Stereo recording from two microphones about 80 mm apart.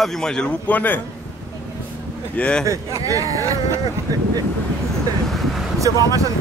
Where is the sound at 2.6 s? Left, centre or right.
Right.